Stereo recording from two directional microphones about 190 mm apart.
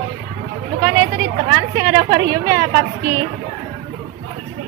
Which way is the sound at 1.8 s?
20° right (ahead or behind).